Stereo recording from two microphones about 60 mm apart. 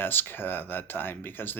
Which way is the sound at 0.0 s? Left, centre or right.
Left.